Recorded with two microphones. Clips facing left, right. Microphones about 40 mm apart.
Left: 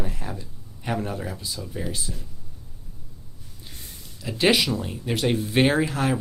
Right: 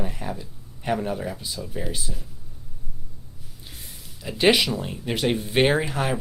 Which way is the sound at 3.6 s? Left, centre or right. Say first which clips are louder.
Even; centre.